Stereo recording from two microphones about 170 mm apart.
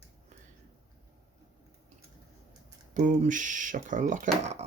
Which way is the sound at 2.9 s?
50° right (ahead or behind).